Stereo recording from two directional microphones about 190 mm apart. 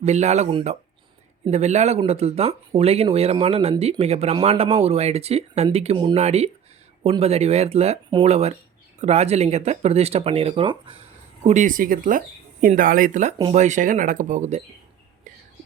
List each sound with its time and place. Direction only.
0.0 s speech: 35° right (ahead or behind)
11.4 s speech: 40° right (ahead or behind)